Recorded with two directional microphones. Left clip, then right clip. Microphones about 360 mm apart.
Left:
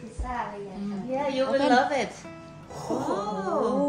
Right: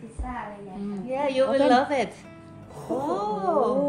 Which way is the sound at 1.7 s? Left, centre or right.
Right.